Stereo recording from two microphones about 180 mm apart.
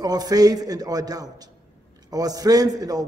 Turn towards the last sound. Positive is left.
turn(degrees=-20)  # may be behind; listen again after turning